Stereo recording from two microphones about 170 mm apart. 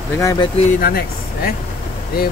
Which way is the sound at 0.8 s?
60° left (ahead or behind).